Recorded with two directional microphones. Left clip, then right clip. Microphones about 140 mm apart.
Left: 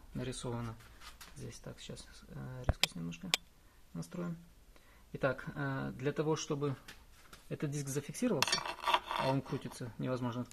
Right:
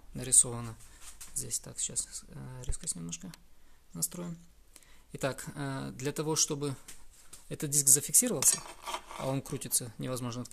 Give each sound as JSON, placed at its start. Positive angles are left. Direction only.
{"t": 0.1, "sound": "speech", "side_deg": -30}
{"t": 8.8, "sound": "cutlery", "side_deg": 0}
{"t": 9.6, "sound": "speech", "side_deg": -30}